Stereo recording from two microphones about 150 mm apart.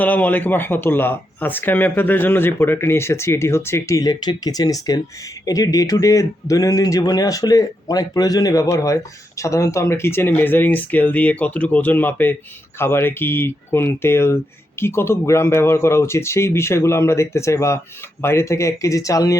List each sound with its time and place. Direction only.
0.0 s speech: 10° left (ahead or behind)